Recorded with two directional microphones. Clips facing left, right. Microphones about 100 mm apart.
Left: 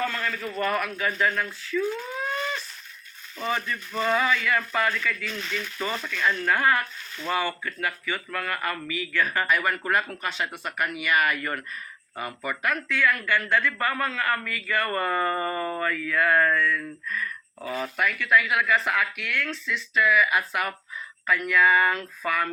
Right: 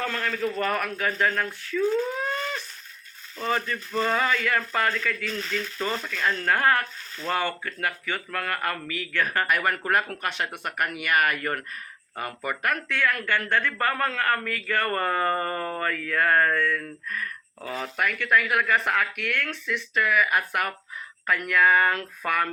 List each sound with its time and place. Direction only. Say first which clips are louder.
0.1 s speech: right 3 dB; 35° right (ahead or behind)
3.3 s speech: right 1 dB; 40° right (ahead or behind)